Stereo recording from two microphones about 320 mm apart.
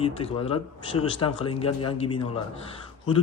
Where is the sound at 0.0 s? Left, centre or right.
Centre.